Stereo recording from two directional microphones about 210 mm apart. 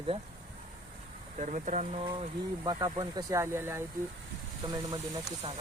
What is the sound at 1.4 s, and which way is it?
Speech, 35° right (ahead or behind).